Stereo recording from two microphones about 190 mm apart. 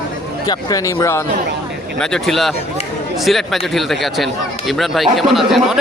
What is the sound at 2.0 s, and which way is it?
Speech, 5° left (ahead or behind).